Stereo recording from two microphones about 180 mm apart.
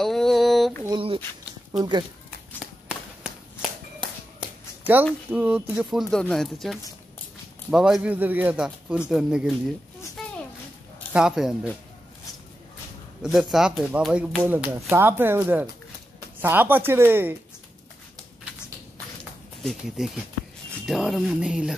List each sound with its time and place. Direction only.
0.0 s a sound: centre (ahead or behind)
0.8 s a sound: 30° right (ahead or behind)
1.7 s speech: 25° right (ahead or behind)
2.6 s run: 5° right (ahead or behind)
5.3 s speech: 5° right (ahead or behind)
11.1 s speech: 5° right (ahead or behind)
13.2 s speech: 5° right (ahead or behind)
19.6 s speech: centre (ahead or behind)